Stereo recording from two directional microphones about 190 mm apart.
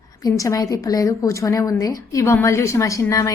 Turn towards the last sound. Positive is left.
turn(degrees=15)  # may be behind; listen again after turning